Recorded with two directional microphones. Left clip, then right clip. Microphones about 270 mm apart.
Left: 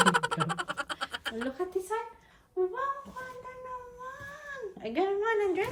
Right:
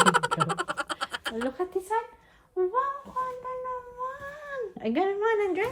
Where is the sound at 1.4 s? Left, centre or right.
Right.